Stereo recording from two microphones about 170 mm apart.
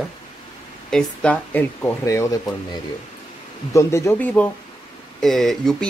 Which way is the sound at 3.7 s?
15° left (ahead or behind).